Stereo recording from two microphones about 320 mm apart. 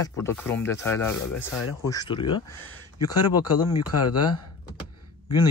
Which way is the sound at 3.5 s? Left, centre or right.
Left.